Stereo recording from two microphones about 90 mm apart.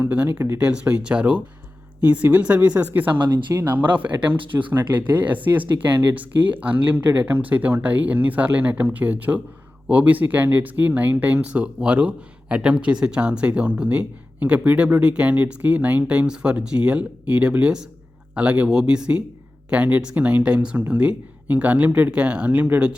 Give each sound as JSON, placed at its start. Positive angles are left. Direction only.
{"t": 0.0, "sound": "speech", "side_deg": -20}
{"t": 0.6, "sound": "speech", "side_deg": -15}